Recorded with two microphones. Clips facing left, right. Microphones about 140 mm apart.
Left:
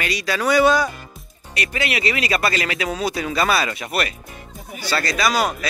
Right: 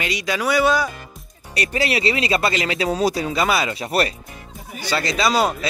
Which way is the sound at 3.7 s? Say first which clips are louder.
Right 4 dB; 30° right (ahead or behind).